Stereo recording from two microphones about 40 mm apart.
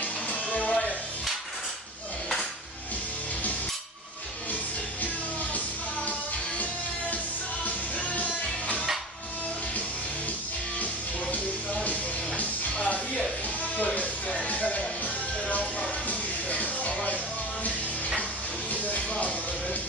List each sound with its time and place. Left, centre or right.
0.0 s music: left
7.6 s music: left
11.3 s music: left
16.1 s music: left
18.7 s music: left